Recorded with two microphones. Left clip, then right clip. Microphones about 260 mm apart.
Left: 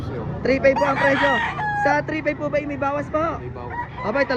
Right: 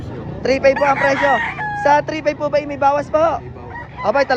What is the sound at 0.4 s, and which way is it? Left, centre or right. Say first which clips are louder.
Speech: right 4 dB; centre.